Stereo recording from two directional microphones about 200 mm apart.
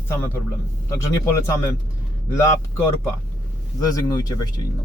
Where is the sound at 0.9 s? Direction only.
15° left (ahead or behind).